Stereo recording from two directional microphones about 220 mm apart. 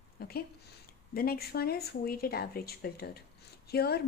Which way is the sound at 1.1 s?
40° left (ahead or behind).